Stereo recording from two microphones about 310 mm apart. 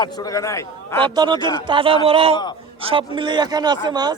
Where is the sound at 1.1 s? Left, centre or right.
Centre.